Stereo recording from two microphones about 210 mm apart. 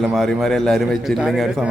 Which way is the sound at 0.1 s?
Centre (ahead or behind).